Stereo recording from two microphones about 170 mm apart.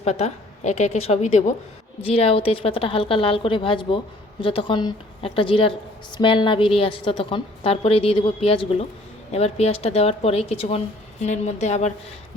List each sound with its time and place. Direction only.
0.0 s a woman's voice: 40° left (ahead or behind)